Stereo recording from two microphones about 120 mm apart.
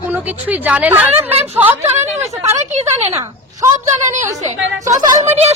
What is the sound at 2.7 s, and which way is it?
Speech, 70° right (ahead or behind).